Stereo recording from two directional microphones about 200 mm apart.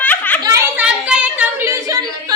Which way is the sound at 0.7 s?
5° right (ahead or behind).